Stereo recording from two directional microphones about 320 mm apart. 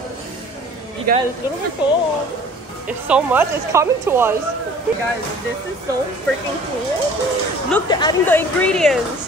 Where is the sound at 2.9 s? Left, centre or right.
Centre.